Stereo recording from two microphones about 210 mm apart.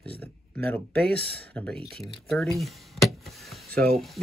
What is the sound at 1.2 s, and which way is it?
Speech, 50° right (ahead or behind).